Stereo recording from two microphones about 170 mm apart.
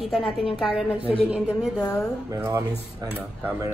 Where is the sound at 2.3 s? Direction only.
20° right (ahead or behind).